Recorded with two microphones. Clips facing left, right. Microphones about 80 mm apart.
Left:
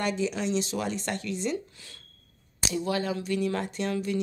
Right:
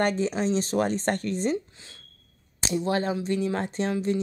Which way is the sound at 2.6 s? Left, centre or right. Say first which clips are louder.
Right 3 dB; right.